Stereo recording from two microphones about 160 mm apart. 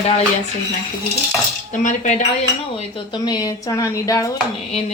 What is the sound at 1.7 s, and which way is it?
Speech, 50° left (ahead or behind).